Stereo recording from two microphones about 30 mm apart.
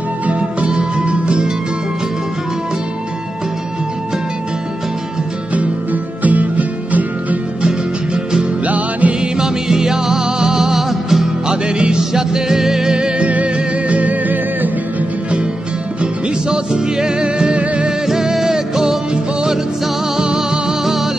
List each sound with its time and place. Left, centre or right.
0.3 s music: right
6.2 s music: right
8.6 s music: right
9.4 s music: right
11.4 s music: right
12.0 s music: centre
13.2 s music: right
16.4 s music: right
18.0 s music: centre
20.2 s music: right
20.8 s music: centre